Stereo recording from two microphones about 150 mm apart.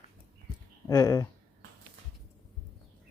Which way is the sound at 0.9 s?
25° left (ahead or behind).